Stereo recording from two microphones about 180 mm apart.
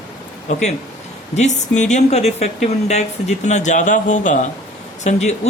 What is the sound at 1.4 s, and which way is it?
Speech, 40° left (ahead or behind).